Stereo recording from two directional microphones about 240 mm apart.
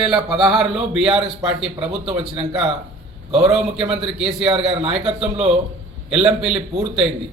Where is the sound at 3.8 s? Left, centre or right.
Right.